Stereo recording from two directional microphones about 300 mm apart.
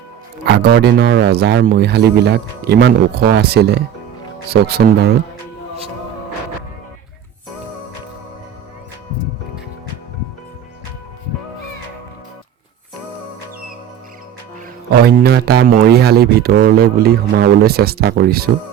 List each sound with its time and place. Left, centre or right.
0.4 s speech: right
14.8 s speech: right